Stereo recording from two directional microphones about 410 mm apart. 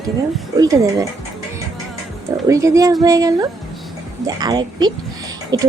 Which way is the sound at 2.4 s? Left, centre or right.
Centre.